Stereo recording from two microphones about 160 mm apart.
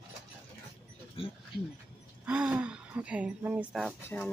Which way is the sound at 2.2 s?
5° right (ahead or behind).